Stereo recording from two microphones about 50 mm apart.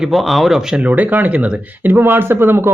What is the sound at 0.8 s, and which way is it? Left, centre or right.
Speech, right.